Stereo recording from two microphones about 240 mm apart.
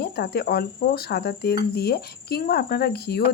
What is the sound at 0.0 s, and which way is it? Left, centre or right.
Speech, left.